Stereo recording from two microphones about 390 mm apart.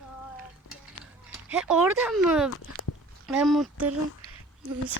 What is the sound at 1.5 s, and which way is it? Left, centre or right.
Speech, centre.